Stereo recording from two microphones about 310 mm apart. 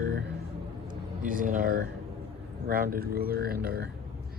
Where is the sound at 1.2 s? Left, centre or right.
Right.